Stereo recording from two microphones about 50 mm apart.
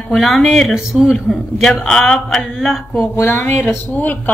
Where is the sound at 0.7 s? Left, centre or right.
Centre.